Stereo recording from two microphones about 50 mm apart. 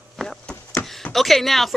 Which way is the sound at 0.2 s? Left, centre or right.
Centre.